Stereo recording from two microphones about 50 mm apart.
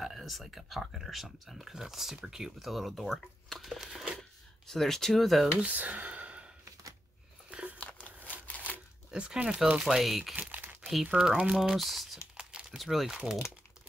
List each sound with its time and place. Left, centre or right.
0.0 s speech: centre
4.2 s speech: centre
5.6 s sigh: right
8.5 s crumpling: left
9.1 s speech: centre
9.8 s speech: centre
10.6 s crumpling: right
11.1 s speech: centre
11.5 s speech: centre
13.1 s speech: centre